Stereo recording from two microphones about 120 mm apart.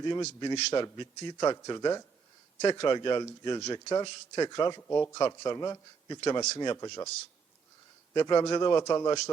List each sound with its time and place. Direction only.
0.3 s a man's voice: 35° left (ahead or behind)
4.8 s a man's voice: 20° left (ahead or behind)
6.7 s a man's voice: 25° left (ahead or behind)
8.1 s speech: 35° left (ahead or behind)